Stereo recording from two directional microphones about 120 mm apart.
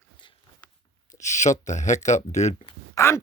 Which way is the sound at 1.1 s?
80° left.